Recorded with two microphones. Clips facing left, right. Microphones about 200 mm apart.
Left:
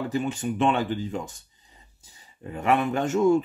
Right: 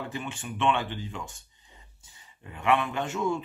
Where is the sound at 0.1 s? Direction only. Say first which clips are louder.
Left 9 dB; 40° left (ahead or behind).